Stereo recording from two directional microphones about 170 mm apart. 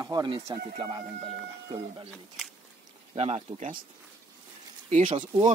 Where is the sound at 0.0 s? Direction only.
25° right (ahead or behind).